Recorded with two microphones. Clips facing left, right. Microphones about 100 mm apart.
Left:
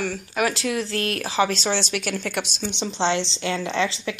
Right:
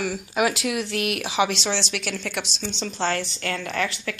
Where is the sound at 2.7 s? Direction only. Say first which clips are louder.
Left 2 dB; 20° left (ahead or behind).